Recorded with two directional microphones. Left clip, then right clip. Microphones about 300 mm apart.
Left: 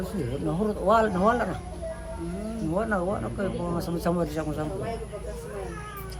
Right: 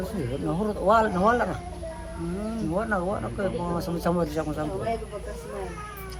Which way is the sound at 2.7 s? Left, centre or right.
Centre.